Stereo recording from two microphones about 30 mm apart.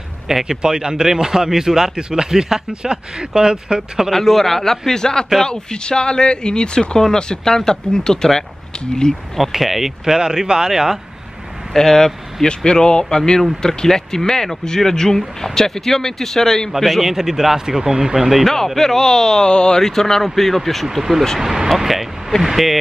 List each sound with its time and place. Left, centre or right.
0.5 s speech: right
4.1 s speech: centre
4.9 s speech: left
9.6 s a man's voice: centre
10.1 s speech: right
11.7 s speech: centre
12.4 s speech: left
15.0 s speech: centre
17.0 s a man's voice: centre
18.4 s speech: centre; by 19.8 s left
19.8 s speech: centre
21.4 s a man's voice: centre